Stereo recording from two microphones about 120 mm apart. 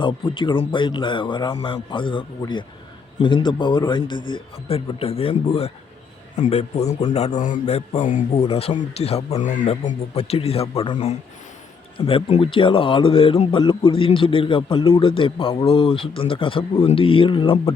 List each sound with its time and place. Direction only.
0.0 s a man's voice: 45° left (ahead or behind); by 8.4 s 90° left
8.4 s speech: 55° left (ahead or behind); by 9.6 s 85° left
9.8 s a man's voice: 55° left (ahead or behind)
10.9 s speech: 70° left (ahead or behind)
11.9 s a man's voice: 50° left (ahead or behind)